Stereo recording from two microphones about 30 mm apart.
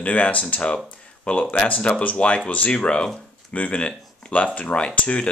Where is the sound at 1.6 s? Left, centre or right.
Left.